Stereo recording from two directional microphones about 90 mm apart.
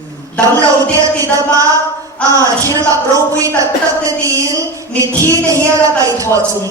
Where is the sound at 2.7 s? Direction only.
40° right (ahead or behind).